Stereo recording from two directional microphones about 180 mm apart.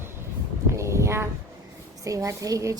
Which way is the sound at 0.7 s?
15° right (ahead or behind).